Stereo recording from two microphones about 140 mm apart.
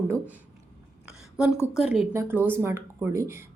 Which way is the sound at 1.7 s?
5° right (ahead or behind).